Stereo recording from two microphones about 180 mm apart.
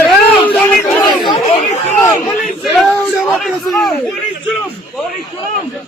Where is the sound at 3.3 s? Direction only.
Centre (ahead or behind).